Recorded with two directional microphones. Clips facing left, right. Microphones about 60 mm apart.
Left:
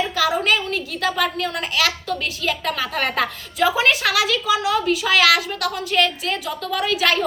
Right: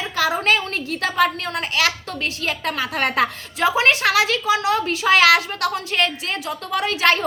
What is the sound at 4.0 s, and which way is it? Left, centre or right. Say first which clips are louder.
A woman's voice: right 2 dB; right.